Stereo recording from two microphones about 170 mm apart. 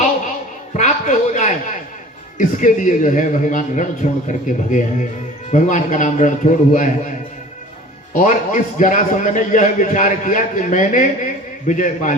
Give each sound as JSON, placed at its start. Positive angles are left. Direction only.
{"t": 0.8, "sound": "a man's voice", "side_deg": 45}
{"t": 8.1, "sound": "a man's voice", "side_deg": 50}